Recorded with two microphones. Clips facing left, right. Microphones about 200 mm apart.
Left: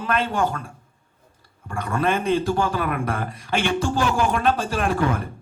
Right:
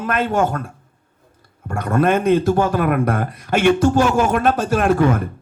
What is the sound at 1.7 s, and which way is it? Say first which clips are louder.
A man's voice: right 6 dB; 50° right (ahead or behind).